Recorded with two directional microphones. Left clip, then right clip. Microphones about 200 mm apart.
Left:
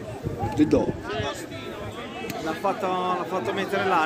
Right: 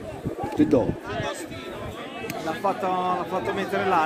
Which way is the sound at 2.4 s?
25° right (ahead or behind).